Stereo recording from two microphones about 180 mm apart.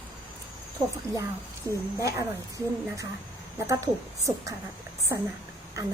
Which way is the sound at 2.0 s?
15° right (ahead or behind).